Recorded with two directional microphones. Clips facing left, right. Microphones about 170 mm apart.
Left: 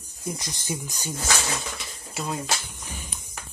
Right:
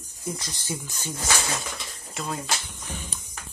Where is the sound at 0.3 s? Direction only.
15° left (ahead or behind).